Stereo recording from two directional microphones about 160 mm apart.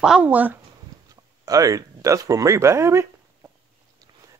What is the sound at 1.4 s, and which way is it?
Speech, 20° right (ahead or behind).